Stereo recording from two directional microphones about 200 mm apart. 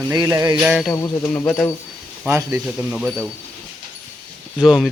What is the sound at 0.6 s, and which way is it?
Mechanisms, centre (ahead or behind).